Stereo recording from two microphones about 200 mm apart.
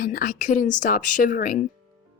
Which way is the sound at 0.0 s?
45° left (ahead or behind).